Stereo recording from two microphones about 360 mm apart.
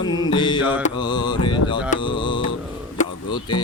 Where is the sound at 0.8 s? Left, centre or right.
Centre.